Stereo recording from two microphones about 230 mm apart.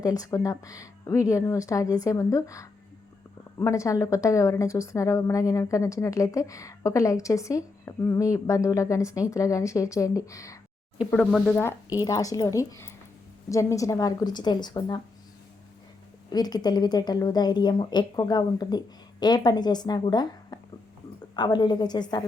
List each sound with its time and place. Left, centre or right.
0.0 s a woman's voice: centre
11.1 s a woman's voice: centre
16.3 s a woman's voice: centre